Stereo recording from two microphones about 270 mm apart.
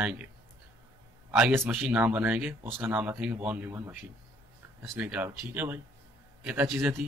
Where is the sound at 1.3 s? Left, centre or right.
Centre.